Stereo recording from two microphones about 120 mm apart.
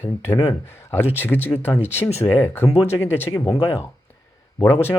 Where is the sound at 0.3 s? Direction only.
20° left (ahead or behind).